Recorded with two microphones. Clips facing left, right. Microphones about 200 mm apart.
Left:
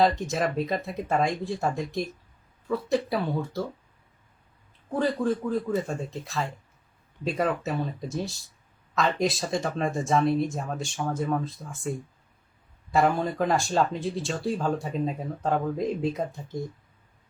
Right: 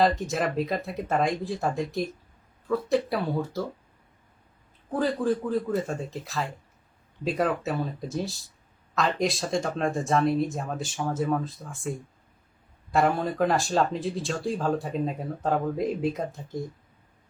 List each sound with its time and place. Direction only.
0.0 s speech: centre (ahead or behind)
4.9 s speech: centre (ahead or behind)